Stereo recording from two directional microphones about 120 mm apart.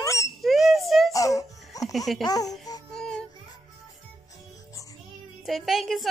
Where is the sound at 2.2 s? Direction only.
30° left (ahead or behind).